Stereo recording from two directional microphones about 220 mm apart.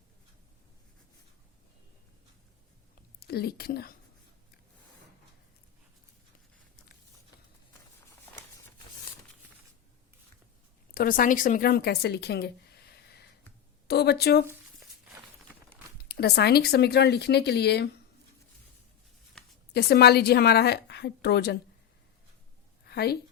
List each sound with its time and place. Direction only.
3.2 s a woman's voice: 45° left (ahead or behind)
10.9 s speech: 40° left (ahead or behind)
16.0 s a woman's voice: 45° left (ahead or behind)
19.7 s a woman's voice: 45° left (ahead or behind)
22.9 s a sound: 45° left (ahead or behind)